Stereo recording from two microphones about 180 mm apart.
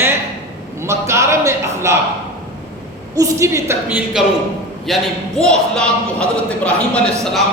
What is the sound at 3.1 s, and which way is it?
Speech, 15° right (ahead or behind).